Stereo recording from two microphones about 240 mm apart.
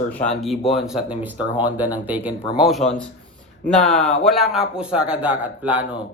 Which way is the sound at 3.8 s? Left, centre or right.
Left.